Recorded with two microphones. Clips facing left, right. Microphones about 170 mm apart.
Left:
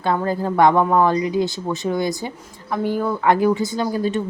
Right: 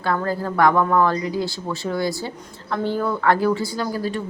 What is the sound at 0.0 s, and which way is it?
A woman's voice, 20° left (ahead or behind).